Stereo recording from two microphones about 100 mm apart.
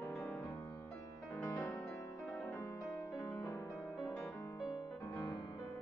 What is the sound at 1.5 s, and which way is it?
Music, 35° left (ahead or behind).